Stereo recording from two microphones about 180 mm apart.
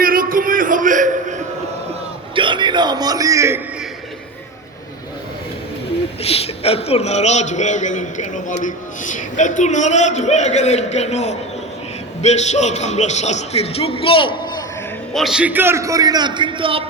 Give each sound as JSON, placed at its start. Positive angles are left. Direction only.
{"t": 0.0, "sound": "a sound", "side_deg": -50}
{"t": 2.3, "sound": "a man's voice", "side_deg": -25}
{"t": 6.2, "sound": "a man's voice", "side_deg": 35}
{"t": 15.1, "sound": "a man's voice", "side_deg": 0}